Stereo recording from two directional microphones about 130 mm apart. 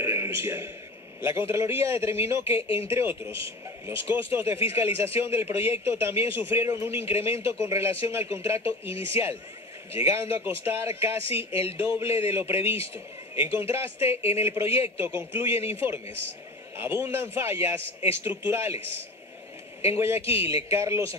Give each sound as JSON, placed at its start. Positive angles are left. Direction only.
{"t": 0.0, "sound": "a man's voice", "side_deg": -20}
{"t": 14.1, "sound": "speech", "side_deg": 50}
{"t": 14.4, "sound": "a man's voice", "side_deg": -20}
{"t": 19.9, "sound": "a man's voice", "side_deg": -20}